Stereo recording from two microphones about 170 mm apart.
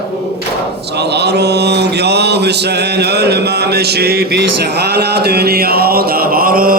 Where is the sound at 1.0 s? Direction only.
75° right (ahead or behind); by 6.8 s 55° right (ahead or behind).